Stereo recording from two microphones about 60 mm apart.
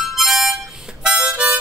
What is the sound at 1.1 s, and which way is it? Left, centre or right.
Harmonica, centre.